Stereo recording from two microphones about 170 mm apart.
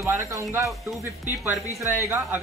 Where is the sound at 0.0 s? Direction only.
20° right (ahead or behind).